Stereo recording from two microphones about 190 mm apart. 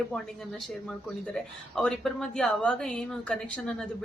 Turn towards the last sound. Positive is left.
turn(degrees=5)  # may be behind; listen again after turning